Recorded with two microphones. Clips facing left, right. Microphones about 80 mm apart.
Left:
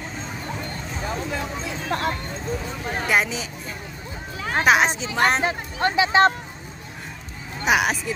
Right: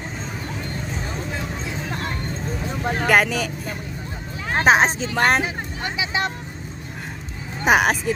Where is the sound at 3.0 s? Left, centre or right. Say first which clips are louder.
Right 4 dB; right.